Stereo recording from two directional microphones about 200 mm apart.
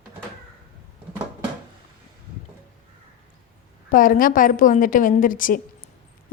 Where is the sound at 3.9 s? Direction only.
45° left (ahead or behind).